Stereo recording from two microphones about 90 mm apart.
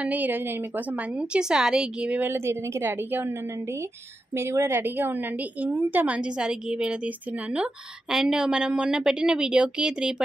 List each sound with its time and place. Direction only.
0.0 s a woman's voice: 20° right (ahead or behind)